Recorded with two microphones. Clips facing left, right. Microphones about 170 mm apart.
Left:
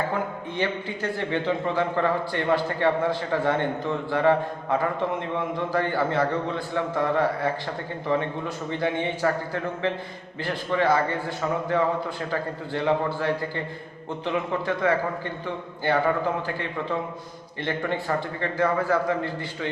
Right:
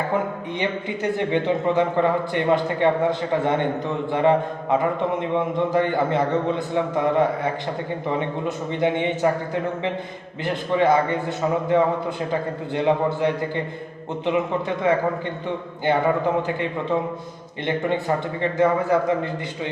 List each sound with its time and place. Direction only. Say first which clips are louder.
0.6 s a man's voice: right 3 dB; 20° right (ahead or behind)
10.4 s a man's voice: right 4 dB; 20° right (ahead or behind)
14.8 s a man's voice: right 5 dB; 20° right (ahead or behind)